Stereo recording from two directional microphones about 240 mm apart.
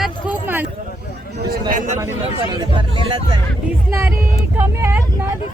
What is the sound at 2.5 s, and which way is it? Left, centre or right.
Speech, centre.